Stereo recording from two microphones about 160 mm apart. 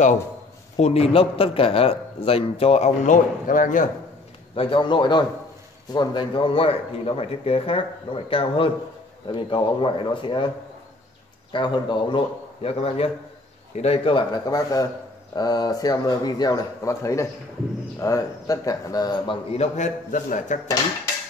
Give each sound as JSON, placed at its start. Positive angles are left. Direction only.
{"t": 0.7, "sound": "a man's voice", "side_deg": 40}
{"t": 4.6, "sound": "a man's voice", "side_deg": 30}
{"t": 11.5, "sound": "a man's voice", "side_deg": 30}
{"t": 19.5, "sound": "a man's voice", "side_deg": 45}